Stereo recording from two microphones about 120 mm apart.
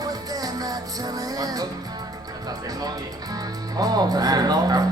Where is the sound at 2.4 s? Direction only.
30° right (ahead or behind).